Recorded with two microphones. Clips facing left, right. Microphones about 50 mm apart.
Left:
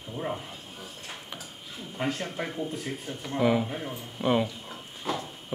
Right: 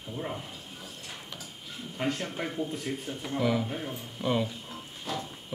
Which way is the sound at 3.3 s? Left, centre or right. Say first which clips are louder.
Left 4 dB; centre.